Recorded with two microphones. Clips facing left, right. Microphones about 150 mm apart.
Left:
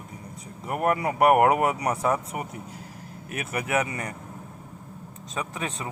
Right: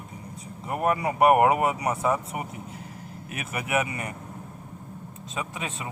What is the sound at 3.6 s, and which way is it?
Speech, 20° right (ahead or behind).